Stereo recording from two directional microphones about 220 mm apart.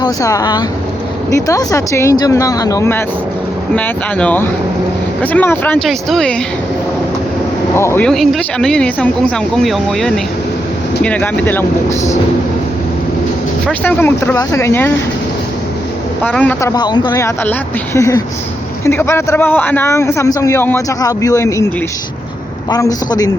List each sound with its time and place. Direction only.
0.0 s a man's voice: 15° left (ahead or behind)
7.8 s a man's voice: 10° left (ahead or behind)
13.7 s a man's voice: 10° left (ahead or behind)
16.2 s a man's voice: 5° left (ahead or behind)
22.7 s a man's voice: 15° left (ahead or behind)